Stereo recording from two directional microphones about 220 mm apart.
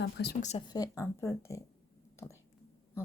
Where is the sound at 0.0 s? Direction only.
45° left (ahead or behind).